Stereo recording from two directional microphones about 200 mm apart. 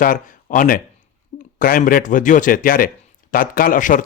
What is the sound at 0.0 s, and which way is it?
Speech, 40° left (ahead or behind).